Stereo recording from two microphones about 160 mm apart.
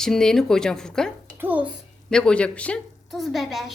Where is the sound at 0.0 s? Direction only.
5° left (ahead or behind).